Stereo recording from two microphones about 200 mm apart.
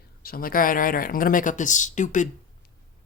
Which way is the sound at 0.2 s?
50° left (ahead or behind).